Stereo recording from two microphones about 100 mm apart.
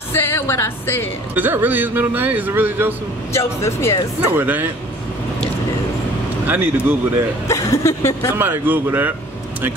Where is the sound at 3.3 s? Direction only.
25° left (ahead or behind).